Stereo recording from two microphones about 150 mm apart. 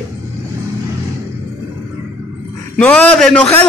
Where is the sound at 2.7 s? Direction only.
10° left (ahead or behind).